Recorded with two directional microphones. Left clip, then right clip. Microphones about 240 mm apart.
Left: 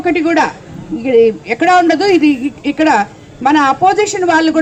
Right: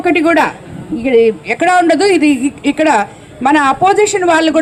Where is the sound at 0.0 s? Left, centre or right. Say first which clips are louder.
Right 2 dB; right.